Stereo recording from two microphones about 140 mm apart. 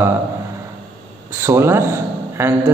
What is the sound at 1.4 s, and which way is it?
A man's voice, 20° right (ahead or behind).